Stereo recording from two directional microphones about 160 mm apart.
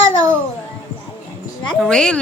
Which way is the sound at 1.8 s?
5° left (ahead or behind).